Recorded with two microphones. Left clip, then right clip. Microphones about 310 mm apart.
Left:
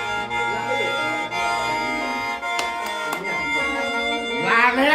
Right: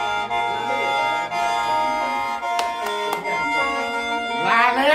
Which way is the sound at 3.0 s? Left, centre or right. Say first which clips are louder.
Right 2 dB; centre.